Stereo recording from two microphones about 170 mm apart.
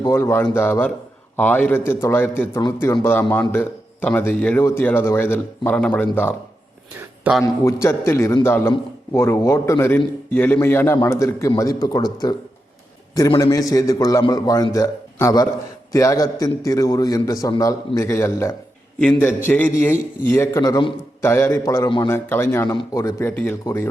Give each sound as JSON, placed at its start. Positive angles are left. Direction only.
{"t": 0.0, "sound": "a man's voice", "side_deg": 15}
{"t": 7.4, "sound": "a man's voice", "side_deg": 15}
{"t": 13.4, "sound": "a man's voice", "side_deg": 20}
{"t": 22.1, "sound": "a man's voice", "side_deg": 15}